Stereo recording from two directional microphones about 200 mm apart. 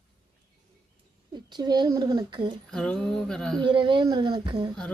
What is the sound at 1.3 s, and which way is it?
Speech, 20° right (ahead or behind).